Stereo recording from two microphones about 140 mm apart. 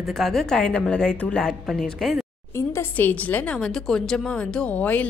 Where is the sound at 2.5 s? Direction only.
15° left (ahead or behind).